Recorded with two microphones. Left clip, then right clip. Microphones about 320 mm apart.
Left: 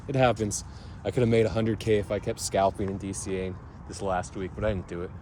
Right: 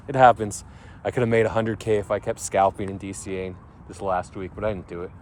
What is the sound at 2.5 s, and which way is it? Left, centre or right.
Speech, right.